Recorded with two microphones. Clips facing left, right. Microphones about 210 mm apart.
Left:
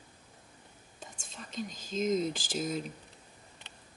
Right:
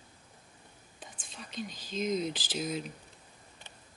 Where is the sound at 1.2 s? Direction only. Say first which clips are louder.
Left 1 dB; 45° left (ahead or behind).